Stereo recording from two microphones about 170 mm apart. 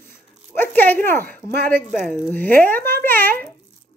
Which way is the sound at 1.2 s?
65° right (ahead or behind).